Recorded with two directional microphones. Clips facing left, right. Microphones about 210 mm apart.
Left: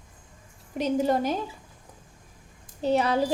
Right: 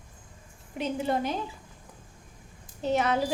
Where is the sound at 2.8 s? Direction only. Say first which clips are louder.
Left 3 dB; 35° left (ahead or behind).